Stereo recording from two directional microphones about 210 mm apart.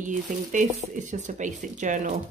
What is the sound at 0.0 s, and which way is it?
Speech, 35° right (ahead or behind).